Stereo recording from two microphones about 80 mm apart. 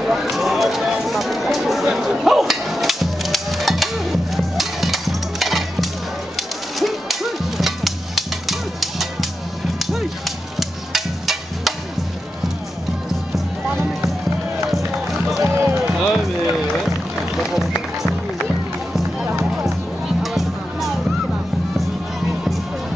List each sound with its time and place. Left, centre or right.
0.0 s a sound: centre
6.8 s music: centre
15.0 s run: centre
15.6 s music: right
17.4 s run: centre
20.2 s music: centre